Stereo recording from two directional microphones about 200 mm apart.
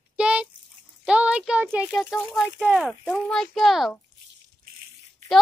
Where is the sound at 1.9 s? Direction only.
Centre (ahead or behind).